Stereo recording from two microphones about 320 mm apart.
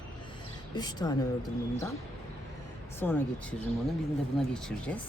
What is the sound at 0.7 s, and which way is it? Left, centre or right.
Speech, centre.